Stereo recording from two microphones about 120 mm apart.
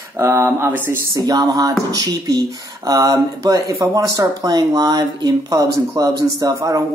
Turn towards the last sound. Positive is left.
turn(degrees=-30)  # may be behind; listen again after turning